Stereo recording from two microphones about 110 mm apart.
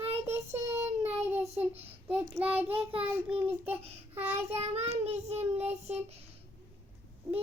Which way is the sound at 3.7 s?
65° right (ahead or behind).